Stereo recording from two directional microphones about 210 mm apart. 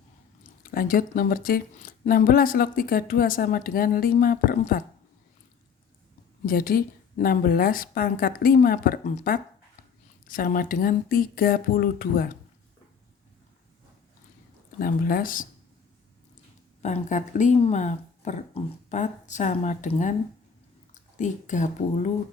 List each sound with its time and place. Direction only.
0.6 s speech: 40° left (ahead or behind)
6.4 s speech: 45° left (ahead or behind)
14.8 s speech: 45° left (ahead or behind)
16.8 s speech: 35° left (ahead or behind)